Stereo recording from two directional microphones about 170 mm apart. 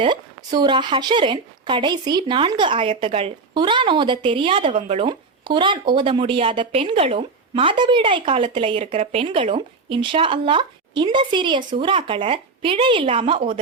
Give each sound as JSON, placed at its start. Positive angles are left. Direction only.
{"t": 0.0, "sound": "a woman's voice", "side_deg": -25}